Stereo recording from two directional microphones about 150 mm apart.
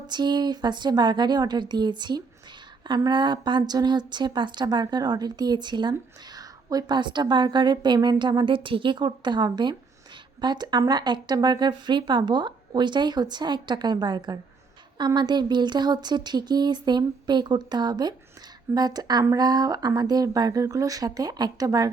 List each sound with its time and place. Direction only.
0.1 s speech: 30° right (ahead or behind)